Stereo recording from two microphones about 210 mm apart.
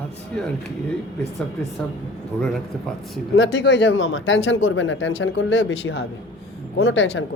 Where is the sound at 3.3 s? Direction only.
65° left (ahead or behind).